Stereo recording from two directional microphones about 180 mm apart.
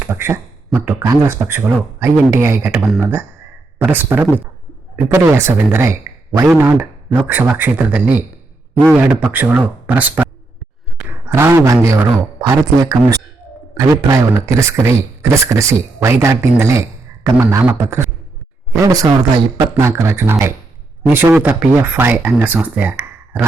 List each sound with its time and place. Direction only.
0.0 s a man's voice: 15° right (ahead or behind)